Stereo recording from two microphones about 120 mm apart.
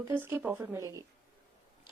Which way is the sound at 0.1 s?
20° right (ahead or behind).